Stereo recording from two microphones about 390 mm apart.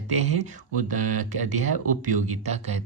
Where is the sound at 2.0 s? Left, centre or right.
Centre.